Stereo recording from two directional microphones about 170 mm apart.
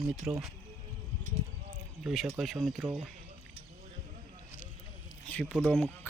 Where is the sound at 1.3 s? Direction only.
40° right (ahead or behind).